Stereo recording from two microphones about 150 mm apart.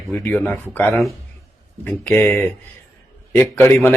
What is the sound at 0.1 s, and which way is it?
Speech, 15° left (ahead or behind).